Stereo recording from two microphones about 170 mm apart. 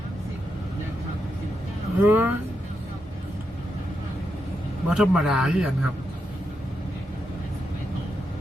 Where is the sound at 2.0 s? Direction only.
10° right (ahead or behind).